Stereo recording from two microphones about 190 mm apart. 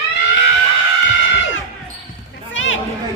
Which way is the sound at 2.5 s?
90° left.